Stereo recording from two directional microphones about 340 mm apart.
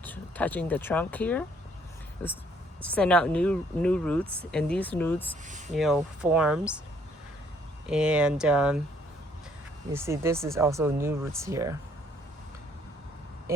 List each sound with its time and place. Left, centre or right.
0.0 s speech: centre
5.5 s speech: right
5.7 s speech: centre
7.9 s speech: centre
9.9 s speech: centre